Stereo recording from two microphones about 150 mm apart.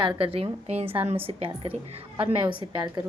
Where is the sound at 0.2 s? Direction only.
35° right (ahead or behind).